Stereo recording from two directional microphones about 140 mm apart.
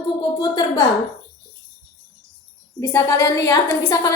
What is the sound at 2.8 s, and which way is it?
A woman's voice, 15° left (ahead or behind).